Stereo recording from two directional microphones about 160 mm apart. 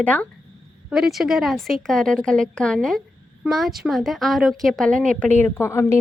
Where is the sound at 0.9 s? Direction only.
Centre (ahead or behind); by 5.9 s 15° left (ahead or behind).